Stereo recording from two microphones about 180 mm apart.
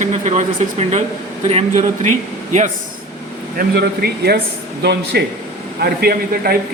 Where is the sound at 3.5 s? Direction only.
60° right (ahead or behind).